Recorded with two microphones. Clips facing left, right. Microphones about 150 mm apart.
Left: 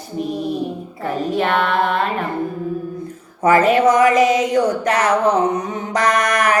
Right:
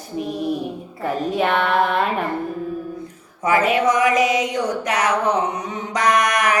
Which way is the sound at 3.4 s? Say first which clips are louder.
Left 5 dB; 50° left (ahead or behind).